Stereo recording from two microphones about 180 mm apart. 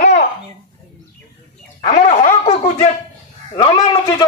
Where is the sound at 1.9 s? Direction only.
40° left (ahead or behind).